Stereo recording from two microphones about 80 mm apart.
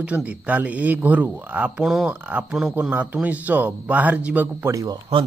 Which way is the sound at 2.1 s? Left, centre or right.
Right.